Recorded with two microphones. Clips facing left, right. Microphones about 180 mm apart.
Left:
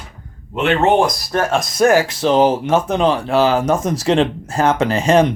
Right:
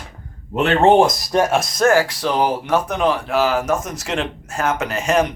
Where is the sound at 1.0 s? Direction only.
15° right (ahead or behind).